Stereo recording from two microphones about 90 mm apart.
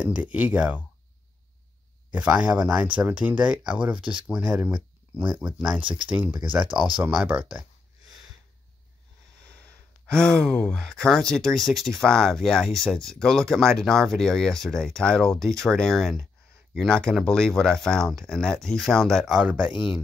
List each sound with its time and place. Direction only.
0.0 s speech: 15° right (ahead or behind)
2.1 s speech: 10° right (ahead or behind)
5.9 s speech: 65° right (ahead or behind)
6.1 s speech: 15° right (ahead or behind)
9.5 s speech: 10° left (ahead or behind)
19.3 s speech: 10° right (ahead or behind)